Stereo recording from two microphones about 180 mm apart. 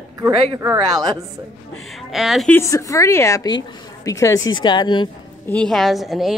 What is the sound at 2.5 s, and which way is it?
A woman's voice, 15° left (ahead or behind).